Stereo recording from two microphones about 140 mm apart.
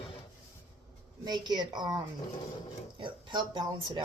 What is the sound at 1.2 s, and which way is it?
Speech, 30° right (ahead or behind).